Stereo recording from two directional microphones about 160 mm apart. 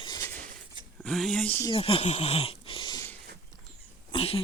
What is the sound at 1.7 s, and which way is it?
Speech, 35° left (ahead or behind).